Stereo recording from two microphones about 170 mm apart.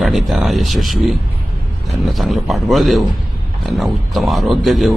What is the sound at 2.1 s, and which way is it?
Speech, centre (ahead or behind).